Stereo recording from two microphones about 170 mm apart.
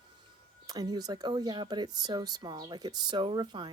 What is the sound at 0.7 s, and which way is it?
Speech, 20° right (ahead or behind).